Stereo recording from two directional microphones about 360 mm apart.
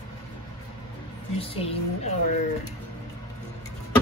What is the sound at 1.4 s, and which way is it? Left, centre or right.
Speech, centre.